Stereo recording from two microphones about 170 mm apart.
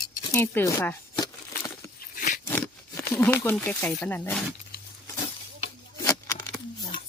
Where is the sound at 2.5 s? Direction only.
10° left (ahead or behind).